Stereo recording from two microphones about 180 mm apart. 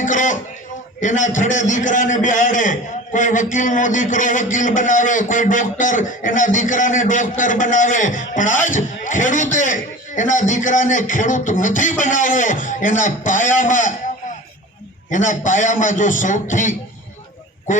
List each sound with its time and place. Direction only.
0.0 s a sound: 45° left (ahead or behind)
1.0 s a man's voice: 45° left (ahead or behind)
15.1 s a man's voice: 45° left (ahead or behind)